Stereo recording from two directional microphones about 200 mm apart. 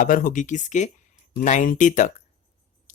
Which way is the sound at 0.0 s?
40° left (ahead or behind).